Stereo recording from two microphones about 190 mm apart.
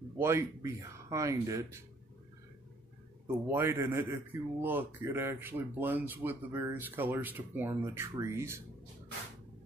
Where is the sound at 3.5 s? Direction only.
10° right (ahead or behind).